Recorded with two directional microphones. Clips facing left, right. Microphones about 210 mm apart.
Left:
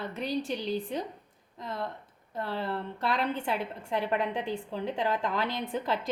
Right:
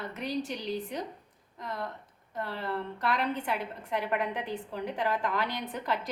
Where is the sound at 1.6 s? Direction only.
25° left (ahead or behind).